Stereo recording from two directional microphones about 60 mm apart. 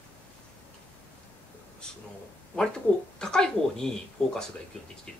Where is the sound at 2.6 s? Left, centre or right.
Centre.